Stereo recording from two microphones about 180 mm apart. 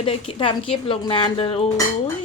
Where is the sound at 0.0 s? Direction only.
30° left (ahead or behind).